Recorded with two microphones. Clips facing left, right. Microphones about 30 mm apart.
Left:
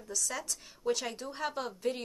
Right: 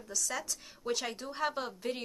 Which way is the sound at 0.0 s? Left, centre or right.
Centre.